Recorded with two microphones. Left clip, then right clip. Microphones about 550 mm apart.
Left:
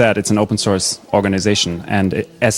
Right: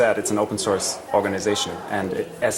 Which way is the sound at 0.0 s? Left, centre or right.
Left.